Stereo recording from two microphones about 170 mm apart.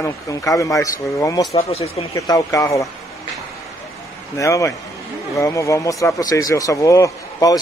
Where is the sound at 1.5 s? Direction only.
35° left (ahead or behind).